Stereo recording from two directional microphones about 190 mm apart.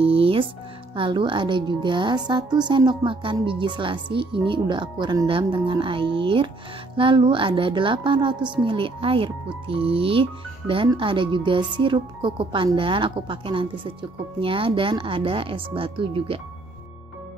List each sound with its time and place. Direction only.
0.0 s music: 30° right (ahead or behind)
0.9 s a woman's voice: 25° right (ahead or behind)